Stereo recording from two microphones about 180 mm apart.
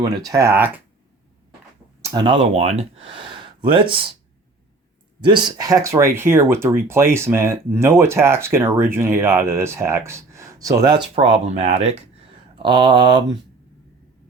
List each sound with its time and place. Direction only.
0.0 s speech: 20° right (ahead or behind)
2.0 s speech: 20° right (ahead or behind)
5.2 s speech: 25° right (ahead or behind)
11.1 s speech: 35° right (ahead or behind)
12.6 s speech: 25° right (ahead or behind)